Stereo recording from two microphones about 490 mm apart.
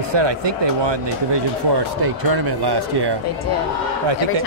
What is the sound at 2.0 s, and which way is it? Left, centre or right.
Speech, right.